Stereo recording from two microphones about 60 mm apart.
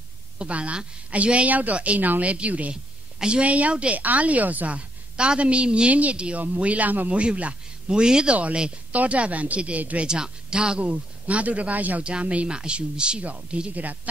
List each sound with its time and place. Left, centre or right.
0.4 s a woman's voice: right
10.0 s a woman's voice: centre